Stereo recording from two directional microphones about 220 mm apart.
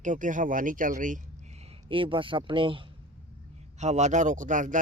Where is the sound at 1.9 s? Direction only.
25° right (ahead or behind).